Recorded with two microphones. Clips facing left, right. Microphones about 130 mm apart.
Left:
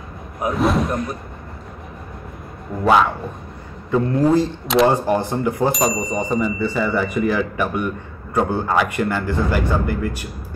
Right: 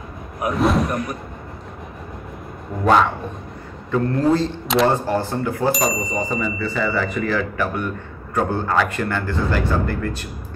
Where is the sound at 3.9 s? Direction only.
15° left (ahead or behind).